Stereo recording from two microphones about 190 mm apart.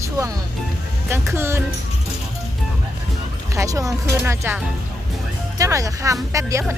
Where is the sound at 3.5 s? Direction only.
15° right (ahead or behind).